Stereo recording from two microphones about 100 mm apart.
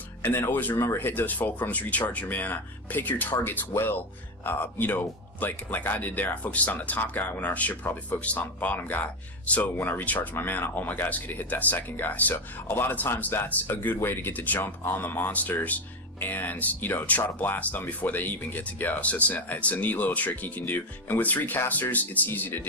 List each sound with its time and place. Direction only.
0.2 s speech: 20° left (ahead or behind)